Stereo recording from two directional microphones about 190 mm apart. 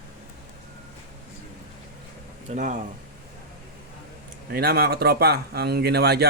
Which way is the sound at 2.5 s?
40° right (ahead or behind).